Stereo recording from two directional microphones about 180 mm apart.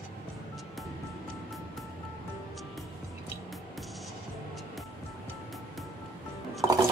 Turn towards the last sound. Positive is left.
turn(degrees=-20)  # may be behind; listen again after turning